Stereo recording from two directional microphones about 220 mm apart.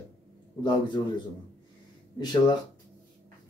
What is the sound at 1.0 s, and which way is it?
Speech, 20° left (ahead or behind).